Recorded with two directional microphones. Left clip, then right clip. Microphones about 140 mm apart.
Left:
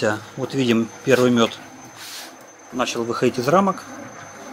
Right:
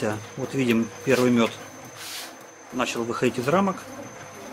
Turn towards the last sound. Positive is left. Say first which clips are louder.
# left 5 dB
turn(degrees=15)  # may be behind; listen again after turning